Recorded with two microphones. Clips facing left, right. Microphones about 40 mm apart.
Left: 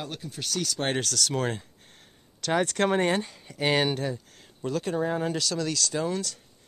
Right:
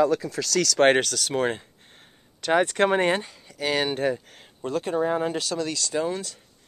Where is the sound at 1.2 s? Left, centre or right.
Right.